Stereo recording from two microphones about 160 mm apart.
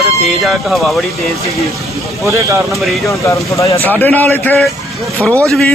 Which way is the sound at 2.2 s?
20° right (ahead or behind).